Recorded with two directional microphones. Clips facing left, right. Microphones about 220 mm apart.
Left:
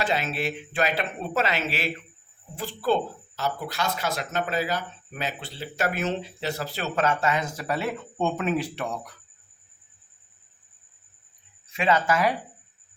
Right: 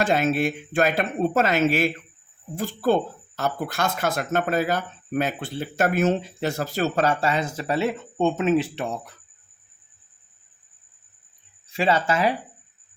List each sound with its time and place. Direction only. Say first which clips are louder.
0.0 s speech: right 6 dB; 50° right (ahead or behind); by 9.0 s 25° right (ahead or behind)
11.7 s speech: right 1 dB; 30° right (ahead or behind)